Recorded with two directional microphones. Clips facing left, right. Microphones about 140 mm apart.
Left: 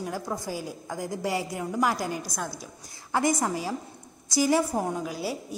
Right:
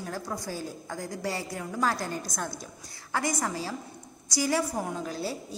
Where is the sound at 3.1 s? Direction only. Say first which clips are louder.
Left 4 dB; 20° left (ahead or behind).